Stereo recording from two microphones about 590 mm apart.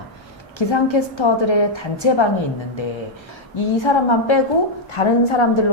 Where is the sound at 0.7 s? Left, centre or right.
Left.